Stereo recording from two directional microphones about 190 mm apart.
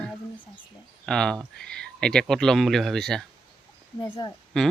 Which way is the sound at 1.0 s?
5° left (ahead or behind).